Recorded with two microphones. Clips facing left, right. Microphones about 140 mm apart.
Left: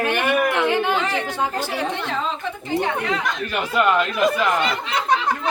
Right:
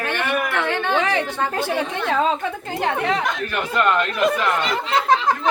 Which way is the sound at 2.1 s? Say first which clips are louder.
Right 6 dB; 60° right (ahead or behind).